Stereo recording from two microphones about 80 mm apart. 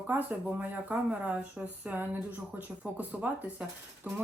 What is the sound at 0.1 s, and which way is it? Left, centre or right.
A woman's voice, right.